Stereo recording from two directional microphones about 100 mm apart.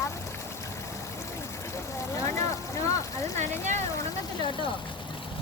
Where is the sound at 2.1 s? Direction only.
30° left (ahead or behind).